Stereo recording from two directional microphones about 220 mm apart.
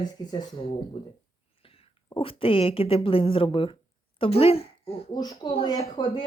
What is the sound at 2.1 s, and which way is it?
Speech, 25° left (ahead or behind).